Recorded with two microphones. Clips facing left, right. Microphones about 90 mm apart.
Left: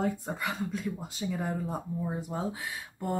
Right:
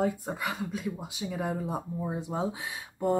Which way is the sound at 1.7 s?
20° right (ahead or behind).